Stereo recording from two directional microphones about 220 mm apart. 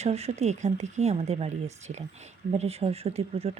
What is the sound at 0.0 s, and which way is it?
Speech, 30° right (ahead or behind).